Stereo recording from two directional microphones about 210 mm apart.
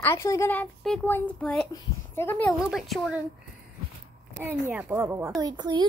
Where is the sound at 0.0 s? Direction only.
15° left (ahead or behind).